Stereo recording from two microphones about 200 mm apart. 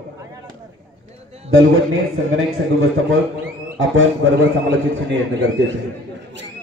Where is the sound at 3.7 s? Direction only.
75° right (ahead or behind).